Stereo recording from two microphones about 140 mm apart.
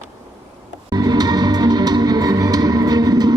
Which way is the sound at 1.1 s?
30° right (ahead or behind).